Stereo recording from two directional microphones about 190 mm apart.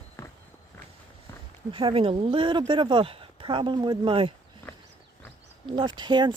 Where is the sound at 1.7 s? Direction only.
30° right (ahead or behind).